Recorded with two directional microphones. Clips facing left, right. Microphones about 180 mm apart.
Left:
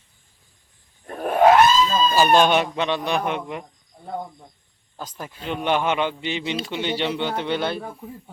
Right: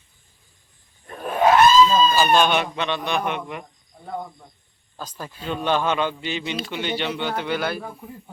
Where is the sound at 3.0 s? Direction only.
35° left (ahead or behind).